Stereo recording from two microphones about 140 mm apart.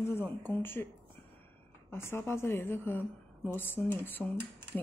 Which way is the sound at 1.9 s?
15° left (ahead or behind).